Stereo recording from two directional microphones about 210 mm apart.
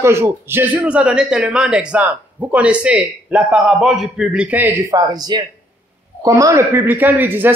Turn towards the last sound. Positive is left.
turn(degrees=-10)  # may be behind; listen again after turning